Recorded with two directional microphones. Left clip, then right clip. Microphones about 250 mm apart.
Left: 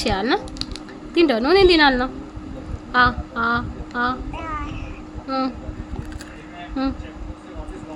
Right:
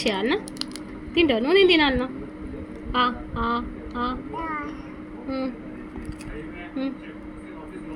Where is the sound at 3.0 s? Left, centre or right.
Centre.